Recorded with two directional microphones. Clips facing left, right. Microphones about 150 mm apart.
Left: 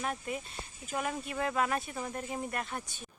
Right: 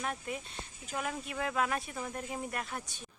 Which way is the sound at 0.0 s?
5° left (ahead or behind).